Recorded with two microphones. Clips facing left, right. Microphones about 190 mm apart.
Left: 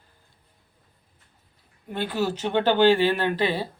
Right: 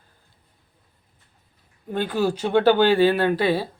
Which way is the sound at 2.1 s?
10° right (ahead or behind).